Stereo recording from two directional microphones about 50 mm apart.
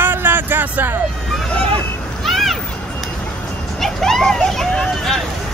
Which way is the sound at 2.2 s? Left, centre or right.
Centre.